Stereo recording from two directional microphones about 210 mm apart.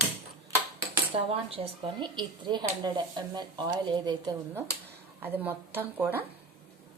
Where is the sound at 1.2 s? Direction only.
25° right (ahead or behind).